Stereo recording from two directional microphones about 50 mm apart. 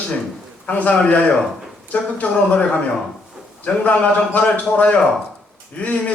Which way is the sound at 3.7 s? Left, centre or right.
Left.